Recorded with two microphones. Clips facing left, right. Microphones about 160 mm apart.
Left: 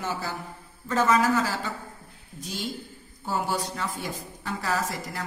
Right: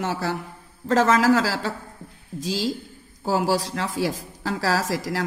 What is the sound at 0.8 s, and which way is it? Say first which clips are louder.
A woman's voice: right 4 dB; 90° right.